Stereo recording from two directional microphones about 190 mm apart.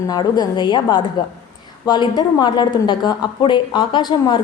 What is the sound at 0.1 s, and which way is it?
Speech, 20° left (ahead or behind).